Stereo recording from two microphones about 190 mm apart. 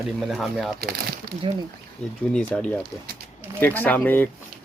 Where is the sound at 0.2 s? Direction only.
Centre (ahead or behind).